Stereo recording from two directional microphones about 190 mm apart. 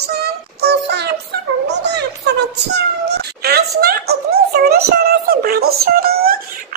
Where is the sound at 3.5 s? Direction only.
55° right (ahead or behind).